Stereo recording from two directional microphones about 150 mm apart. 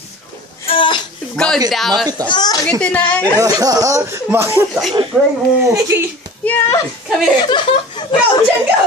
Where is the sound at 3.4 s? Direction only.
25° right (ahead or behind).